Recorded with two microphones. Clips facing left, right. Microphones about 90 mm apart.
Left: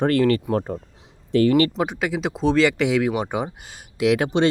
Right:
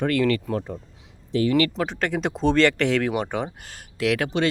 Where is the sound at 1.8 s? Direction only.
10° left (ahead or behind).